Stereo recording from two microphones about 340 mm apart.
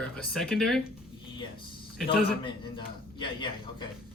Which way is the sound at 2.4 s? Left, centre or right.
Centre.